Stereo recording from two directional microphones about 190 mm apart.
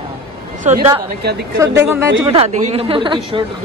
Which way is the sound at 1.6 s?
15° right (ahead or behind).